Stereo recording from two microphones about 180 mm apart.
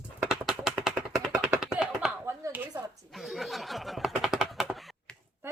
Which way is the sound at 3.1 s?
Centre (ahead or behind).